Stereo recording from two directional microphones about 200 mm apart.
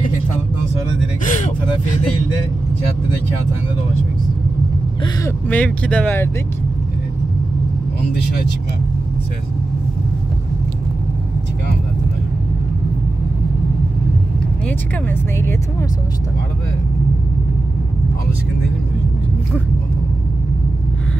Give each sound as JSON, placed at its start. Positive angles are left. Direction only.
{"t": 1.2, "sound": "vehicle", "side_deg": 40}
{"t": 5.5, "sound": "speech", "side_deg": 5}
{"t": 8.1, "sound": "speech", "side_deg": 55}
{"t": 15.0, "sound": "speech", "side_deg": 10}